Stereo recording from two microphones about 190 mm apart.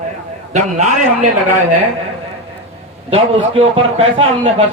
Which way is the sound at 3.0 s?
30° right (ahead or behind).